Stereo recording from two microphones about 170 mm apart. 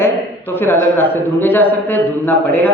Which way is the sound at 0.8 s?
10° left (ahead or behind).